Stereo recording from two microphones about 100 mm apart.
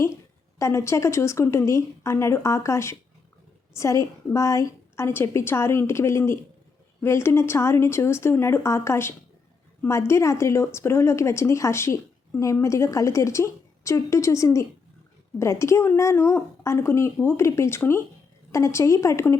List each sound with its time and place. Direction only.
0.6 s a woman's voice: 30° left (ahead or behind)